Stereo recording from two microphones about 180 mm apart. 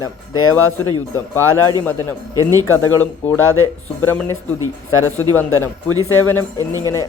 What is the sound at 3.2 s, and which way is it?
Speech, 10° left (ahead or behind).